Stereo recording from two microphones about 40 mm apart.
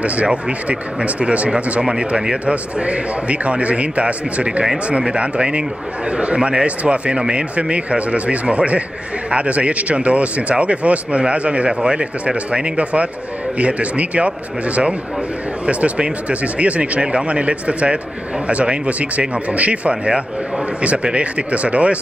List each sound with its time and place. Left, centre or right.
0.0 s speech: right
1.8 s a man's voice: centre
2.4 s a man's voice: right
15.6 s speech: right